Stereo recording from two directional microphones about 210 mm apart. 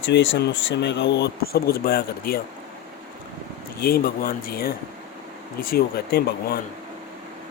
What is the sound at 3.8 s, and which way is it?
A man's voice, 45° left (ahead or behind).